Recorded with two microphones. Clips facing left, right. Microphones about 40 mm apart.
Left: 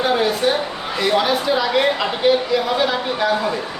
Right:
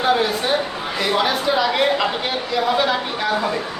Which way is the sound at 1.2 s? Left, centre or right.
Centre.